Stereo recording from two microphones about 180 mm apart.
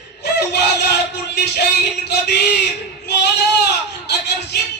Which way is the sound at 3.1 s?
70° left (ahead or behind).